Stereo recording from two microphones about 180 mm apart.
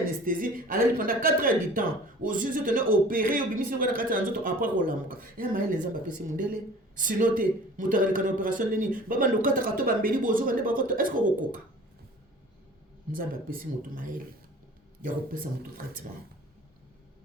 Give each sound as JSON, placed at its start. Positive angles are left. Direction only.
{"t": 0.3, "sound": "speech", "side_deg": -50}
{"t": 13.1, "sound": "speech", "side_deg": -50}